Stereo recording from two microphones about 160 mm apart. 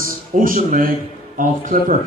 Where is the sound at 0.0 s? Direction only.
60° right (ahead or behind).